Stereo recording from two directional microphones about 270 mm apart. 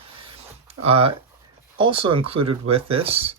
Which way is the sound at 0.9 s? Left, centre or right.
Right.